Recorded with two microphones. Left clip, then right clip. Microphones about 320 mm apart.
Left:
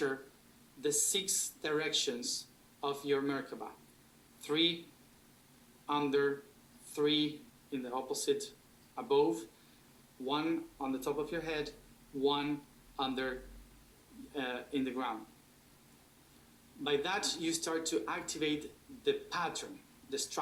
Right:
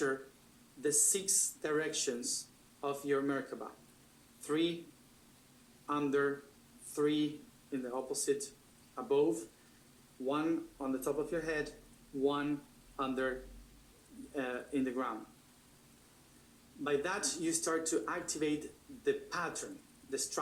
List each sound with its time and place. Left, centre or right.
0.8 s speech: centre
5.8 s speech: centre
10.2 s speech: centre
14.3 s speech: centre
16.8 s speech: centre